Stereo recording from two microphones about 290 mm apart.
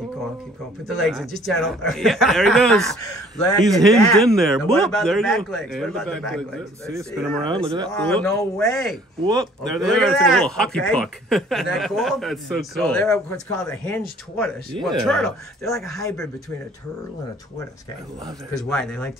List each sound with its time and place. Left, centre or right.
0.8 s a man's voice: centre
3.6 s speech: centre
3.9 s a man's voice: centre
7.4 s speech: centre
8.0 s a man's voice: centre
9.2 s speech: centre
9.6 s a man's voice: centre
18.5 s a man's voice: centre